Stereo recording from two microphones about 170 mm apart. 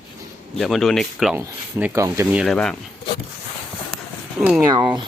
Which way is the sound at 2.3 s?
Centre (ahead or behind).